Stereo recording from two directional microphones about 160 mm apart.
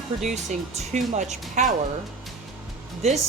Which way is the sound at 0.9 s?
45° right (ahead or behind).